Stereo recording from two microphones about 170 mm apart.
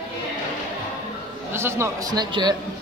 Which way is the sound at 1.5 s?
15° right (ahead or behind).